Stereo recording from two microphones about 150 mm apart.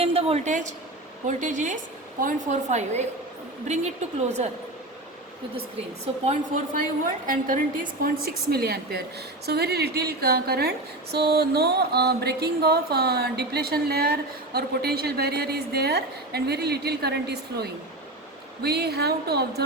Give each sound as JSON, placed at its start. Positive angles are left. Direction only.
{"t": 0.0, "sound": "a woman's voice", "side_deg": -40}
{"t": 7.3, "sound": "a woman's voice", "side_deg": -65}